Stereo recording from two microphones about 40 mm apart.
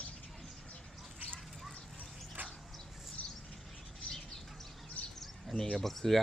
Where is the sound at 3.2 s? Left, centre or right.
Left.